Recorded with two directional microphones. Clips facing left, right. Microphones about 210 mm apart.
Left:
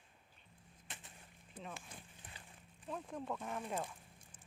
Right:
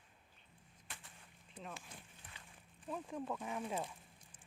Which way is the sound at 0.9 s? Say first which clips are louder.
Left 1 dB; 20° left (ahead or behind).